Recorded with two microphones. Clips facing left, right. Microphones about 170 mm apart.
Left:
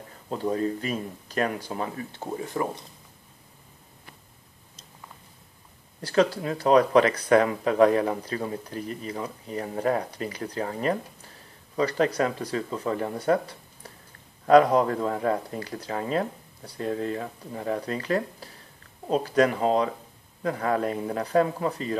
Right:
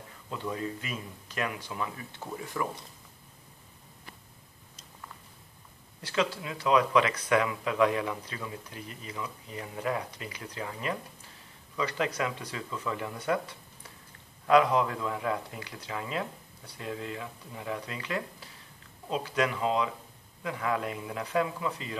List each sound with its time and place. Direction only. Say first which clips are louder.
0.3 s speech: left 8 dB; 40° left (ahead or behind)
5.9 s speech: left 8 dB; 40° left (ahead or behind)